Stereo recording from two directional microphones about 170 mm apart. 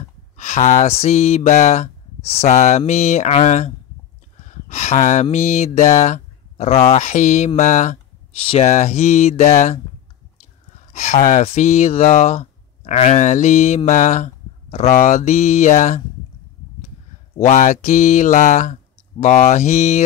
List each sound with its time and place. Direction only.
0.4 s speech: 45° left (ahead or behind)
10.9 s speech: 45° left (ahead or behind)
17.5 s speech: 45° left (ahead or behind)